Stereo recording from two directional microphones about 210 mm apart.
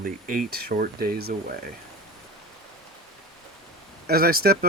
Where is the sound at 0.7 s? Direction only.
45° right (ahead or behind).